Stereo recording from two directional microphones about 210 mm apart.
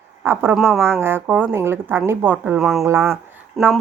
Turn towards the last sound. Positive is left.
turn(degrees=0)  # may be behind; listen again after turning